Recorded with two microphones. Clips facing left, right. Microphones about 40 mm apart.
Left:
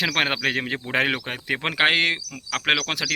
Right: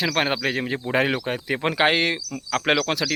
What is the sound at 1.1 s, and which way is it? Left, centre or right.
Speech, left.